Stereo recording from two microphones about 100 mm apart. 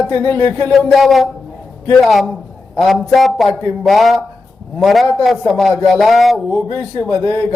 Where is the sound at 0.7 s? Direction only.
Centre (ahead or behind).